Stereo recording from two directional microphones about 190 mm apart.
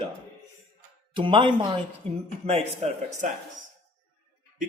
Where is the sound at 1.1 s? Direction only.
25° right (ahead or behind).